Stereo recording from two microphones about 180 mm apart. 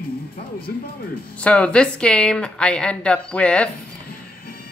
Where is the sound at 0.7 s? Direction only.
60° left (ahead or behind).